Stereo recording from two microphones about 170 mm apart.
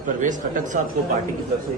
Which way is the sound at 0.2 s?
50° right (ahead or behind).